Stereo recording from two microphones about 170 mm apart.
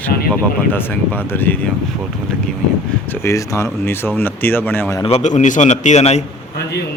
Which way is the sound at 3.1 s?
15° left (ahead or behind).